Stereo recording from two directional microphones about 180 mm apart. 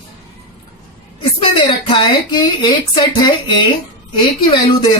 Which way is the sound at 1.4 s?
30° left (ahead or behind).